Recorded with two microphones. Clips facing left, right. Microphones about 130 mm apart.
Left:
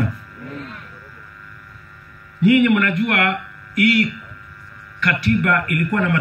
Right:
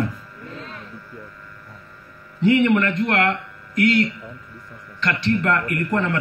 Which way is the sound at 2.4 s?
30° right (ahead or behind).